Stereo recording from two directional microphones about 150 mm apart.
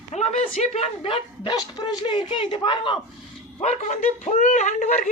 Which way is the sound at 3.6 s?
50° left (ahead or behind).